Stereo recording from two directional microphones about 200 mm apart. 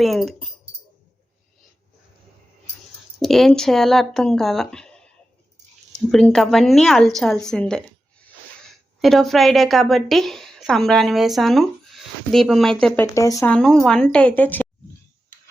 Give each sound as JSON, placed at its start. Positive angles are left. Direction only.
{"t": 0.0, "sound": "a woman's voice", "side_deg": 0}
{"t": 3.2, "sound": "speech", "side_deg": 0}
{"t": 6.1, "sound": "a woman's voice", "side_deg": 0}
{"t": 9.0, "sound": "a woman's voice", "side_deg": 0}
{"t": 13.1, "sound": "speech", "side_deg": 15}
{"t": 13.5, "sound": "a woman's voice", "side_deg": 5}